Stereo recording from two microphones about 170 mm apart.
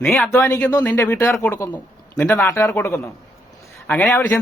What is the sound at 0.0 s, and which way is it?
Speech, centre (ahead or behind).